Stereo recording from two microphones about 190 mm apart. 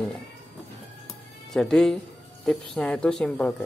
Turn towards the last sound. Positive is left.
turn(degrees=5)  # may be behind; listen again after turning